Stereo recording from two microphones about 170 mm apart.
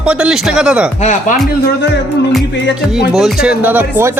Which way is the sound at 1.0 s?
45° left (ahead or behind).